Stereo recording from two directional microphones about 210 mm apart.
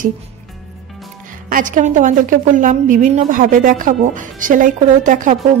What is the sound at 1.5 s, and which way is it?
Speech, 40° right (ahead or behind).